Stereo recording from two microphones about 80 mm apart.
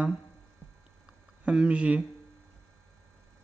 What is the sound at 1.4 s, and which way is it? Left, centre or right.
Speech, centre.